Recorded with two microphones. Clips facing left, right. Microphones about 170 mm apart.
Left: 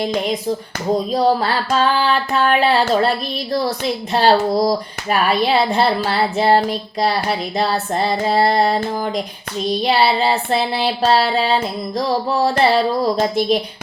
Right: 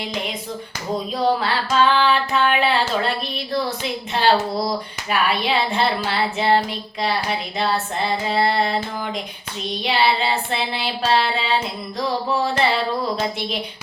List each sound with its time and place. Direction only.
0.0 s speech: 40° left (ahead or behind)
4.1 s speech: 40° left (ahead or behind)